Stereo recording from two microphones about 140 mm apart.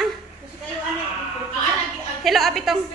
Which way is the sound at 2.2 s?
Centre (ahead or behind).